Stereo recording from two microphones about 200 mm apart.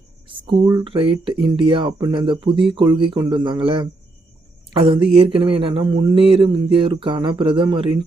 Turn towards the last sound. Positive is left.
turn(degrees=-25)  # may be behind; listen again after turning